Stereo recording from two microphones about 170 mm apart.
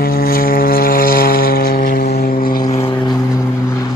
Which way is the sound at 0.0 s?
60° left (ahead or behind).